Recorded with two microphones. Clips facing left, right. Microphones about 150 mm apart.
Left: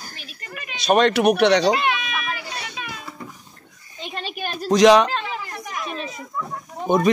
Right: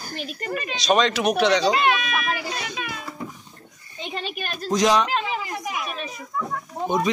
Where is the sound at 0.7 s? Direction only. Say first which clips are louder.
Left 4 dB; 55° left (ahead or behind).